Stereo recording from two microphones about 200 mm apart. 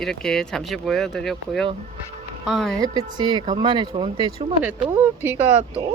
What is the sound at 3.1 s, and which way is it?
Speech, 20° right (ahead or behind).